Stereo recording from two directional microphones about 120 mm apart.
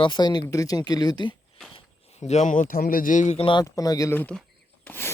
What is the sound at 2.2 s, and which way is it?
Speech, 80° left.